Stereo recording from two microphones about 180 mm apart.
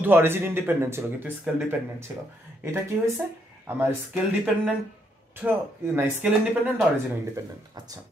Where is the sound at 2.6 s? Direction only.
15° right (ahead or behind).